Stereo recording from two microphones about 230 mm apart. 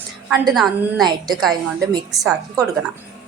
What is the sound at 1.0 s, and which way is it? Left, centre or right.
Speech, centre.